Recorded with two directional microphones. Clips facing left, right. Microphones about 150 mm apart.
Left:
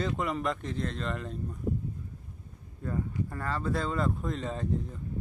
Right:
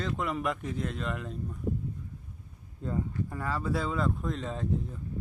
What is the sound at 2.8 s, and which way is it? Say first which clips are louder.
Speech: even; 20° right (ahead or behind).